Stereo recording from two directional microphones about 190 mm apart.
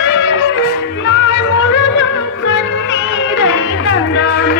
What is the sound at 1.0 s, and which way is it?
Music, 75° left (ahead or behind).